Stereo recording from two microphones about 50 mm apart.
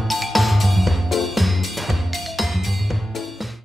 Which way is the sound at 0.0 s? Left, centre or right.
Centre.